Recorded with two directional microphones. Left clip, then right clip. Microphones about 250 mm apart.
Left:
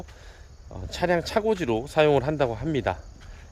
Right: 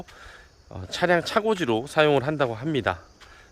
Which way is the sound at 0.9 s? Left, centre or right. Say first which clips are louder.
Right 3 dB; centre.